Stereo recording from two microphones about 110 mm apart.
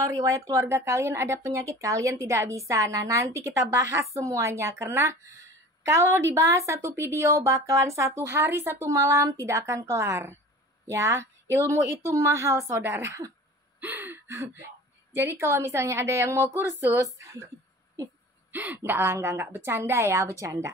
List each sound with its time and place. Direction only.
0.0 s speech: 30° right (ahead or behind)
13.7 s a sound: 15° right (ahead or behind)
15.1 s speech: 20° right (ahead or behind)
16.9 s speech: 30° right (ahead or behind)
18.5 s speech: 15° right (ahead or behind)